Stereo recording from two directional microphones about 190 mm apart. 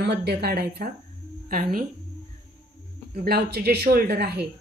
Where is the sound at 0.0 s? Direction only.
60° right (ahead or behind).